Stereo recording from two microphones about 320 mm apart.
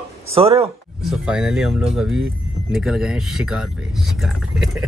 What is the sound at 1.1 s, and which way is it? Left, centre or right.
Speech, centre.